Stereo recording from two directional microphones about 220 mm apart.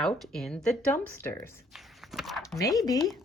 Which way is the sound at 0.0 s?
Centre (ahead or behind).